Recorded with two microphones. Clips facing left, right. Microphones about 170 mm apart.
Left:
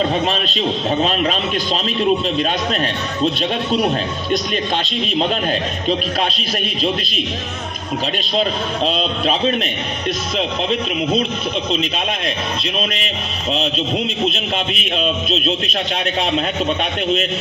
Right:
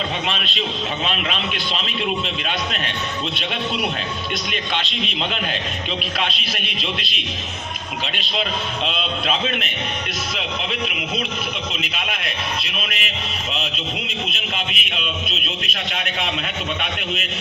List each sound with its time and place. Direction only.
0.3 s speech: 40° left (ahead or behind)
3.7 s speech: 40° left (ahead or behind)
8.2 s speech: 40° left (ahead or behind)